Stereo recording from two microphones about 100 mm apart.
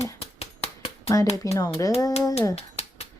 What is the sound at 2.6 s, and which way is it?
Finger snapping, 90° left.